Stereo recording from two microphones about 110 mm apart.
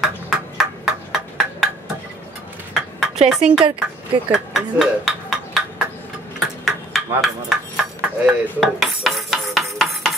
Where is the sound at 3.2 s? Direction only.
5° right (ahead or behind).